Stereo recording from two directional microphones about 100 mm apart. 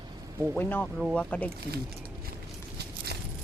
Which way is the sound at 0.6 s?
20° left (ahead or behind).